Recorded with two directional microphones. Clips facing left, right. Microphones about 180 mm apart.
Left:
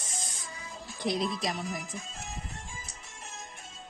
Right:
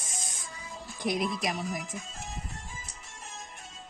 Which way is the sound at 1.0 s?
20° left (ahead or behind).